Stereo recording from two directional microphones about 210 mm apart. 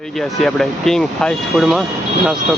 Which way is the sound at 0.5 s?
Centre (ahead or behind).